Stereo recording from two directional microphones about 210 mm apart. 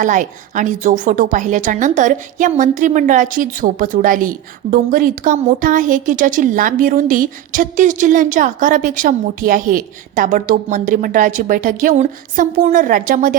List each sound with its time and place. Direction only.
0.0 s a woman's voice: 35° right (ahead or behind)